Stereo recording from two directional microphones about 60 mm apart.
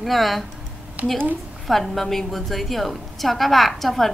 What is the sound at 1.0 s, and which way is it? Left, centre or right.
Speech, right.